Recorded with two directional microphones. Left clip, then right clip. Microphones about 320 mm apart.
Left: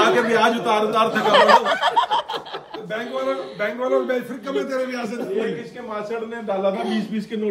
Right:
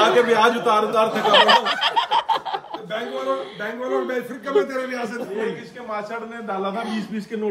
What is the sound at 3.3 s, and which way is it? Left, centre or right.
A man's voice, centre.